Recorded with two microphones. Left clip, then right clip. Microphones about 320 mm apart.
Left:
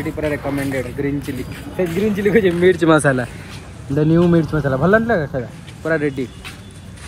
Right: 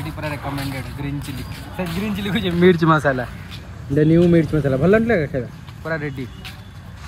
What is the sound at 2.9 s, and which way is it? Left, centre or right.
Speech, left.